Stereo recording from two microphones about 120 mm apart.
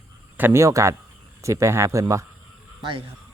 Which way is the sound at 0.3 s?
20° right (ahead or behind).